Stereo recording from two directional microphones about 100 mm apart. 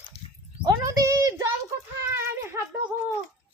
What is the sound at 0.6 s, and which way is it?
Speech, 35° right (ahead or behind).